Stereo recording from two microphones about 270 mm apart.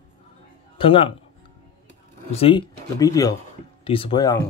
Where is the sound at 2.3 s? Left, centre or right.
Centre.